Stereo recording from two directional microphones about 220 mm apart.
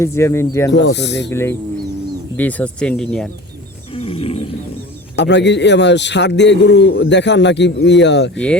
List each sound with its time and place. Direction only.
0.0 s speech: 10° left (ahead or behind)
0.7 s a man's voice: 50° left (ahead or behind)
1.3 s speech: 10° left (ahead or behind)
3.9 s wild animals: 25° left (ahead or behind)
5.1 s a man's voice: 55° left (ahead or behind)